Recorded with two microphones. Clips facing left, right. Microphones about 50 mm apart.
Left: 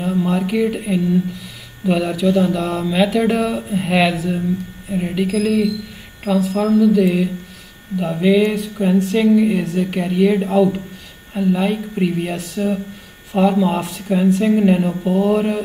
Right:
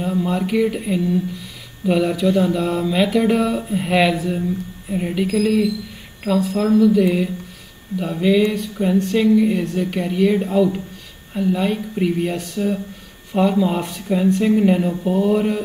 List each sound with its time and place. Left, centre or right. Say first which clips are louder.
0.0 s speech: left 2 dB; centre
1.9 s a sound: even; centre
8.0 s speech: left 2 dB; centre